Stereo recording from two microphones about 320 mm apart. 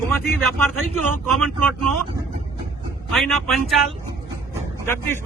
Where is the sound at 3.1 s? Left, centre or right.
Centre.